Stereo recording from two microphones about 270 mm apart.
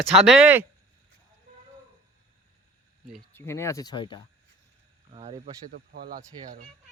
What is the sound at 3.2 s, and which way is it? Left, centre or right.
Speech, centre.